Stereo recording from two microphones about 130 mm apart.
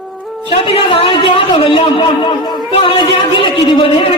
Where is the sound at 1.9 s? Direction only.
35° left (ahead or behind).